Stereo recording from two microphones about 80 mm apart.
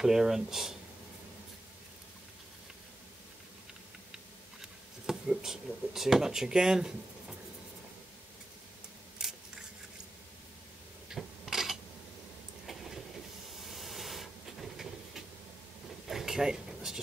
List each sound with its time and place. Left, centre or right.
0.0 s speech: centre
4.1 s a sound: centre
9.2 s scissors: centre
11.1 s rub: centre
12.6 s train: centre
13.6 s hiss: centre
16.1 s a sound: centre